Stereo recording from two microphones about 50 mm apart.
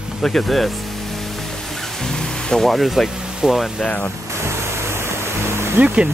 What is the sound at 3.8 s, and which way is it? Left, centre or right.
Speech, left.